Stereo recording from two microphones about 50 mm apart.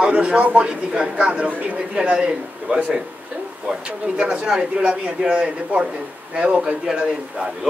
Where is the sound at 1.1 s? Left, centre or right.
Right.